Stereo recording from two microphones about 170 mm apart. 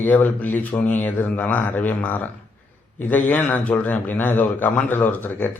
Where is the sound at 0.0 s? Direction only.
10° left (ahead or behind).